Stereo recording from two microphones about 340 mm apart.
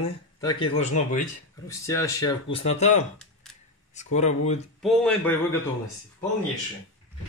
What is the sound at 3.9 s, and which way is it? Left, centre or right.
Speech, centre.